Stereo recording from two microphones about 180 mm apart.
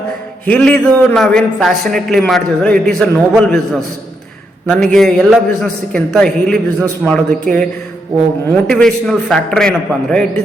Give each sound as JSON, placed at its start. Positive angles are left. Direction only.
{"t": 0.4, "sound": "a man's voice", "side_deg": 5}